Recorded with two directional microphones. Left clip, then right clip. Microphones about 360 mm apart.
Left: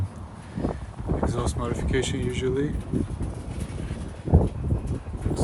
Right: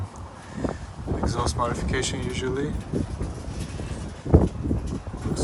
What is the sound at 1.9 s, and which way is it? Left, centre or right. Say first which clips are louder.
Speech: left 1 dB; centre.